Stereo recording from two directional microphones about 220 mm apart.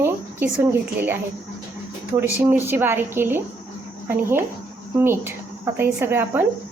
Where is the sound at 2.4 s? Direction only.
10° right (ahead or behind).